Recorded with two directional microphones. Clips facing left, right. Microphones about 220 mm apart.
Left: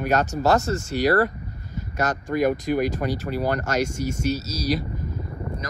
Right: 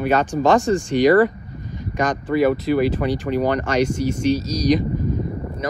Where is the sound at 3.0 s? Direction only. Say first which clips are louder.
Right 5 dB; 10° left (ahead or behind).